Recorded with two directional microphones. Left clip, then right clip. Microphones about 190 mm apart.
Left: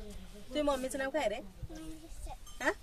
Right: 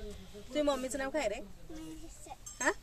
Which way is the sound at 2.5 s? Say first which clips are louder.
Right 1 dB; 20° right (ahead or behind).